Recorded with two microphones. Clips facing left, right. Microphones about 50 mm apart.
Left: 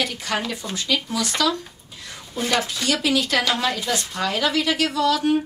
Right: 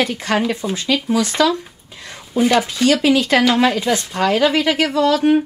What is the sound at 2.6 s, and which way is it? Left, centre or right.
Speech, right.